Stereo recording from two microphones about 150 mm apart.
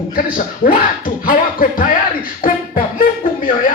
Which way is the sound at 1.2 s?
70° left (ahead or behind).